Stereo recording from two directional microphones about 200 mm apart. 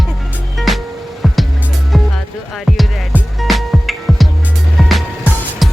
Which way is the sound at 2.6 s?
Centre (ahead or behind).